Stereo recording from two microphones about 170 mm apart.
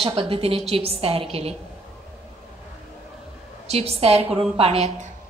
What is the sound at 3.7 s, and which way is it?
A woman's voice, 35° right (ahead or behind).